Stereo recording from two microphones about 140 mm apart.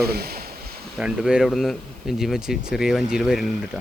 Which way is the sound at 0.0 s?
90° right.